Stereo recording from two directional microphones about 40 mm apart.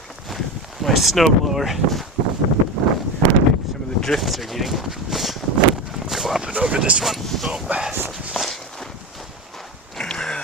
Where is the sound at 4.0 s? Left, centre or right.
Centre.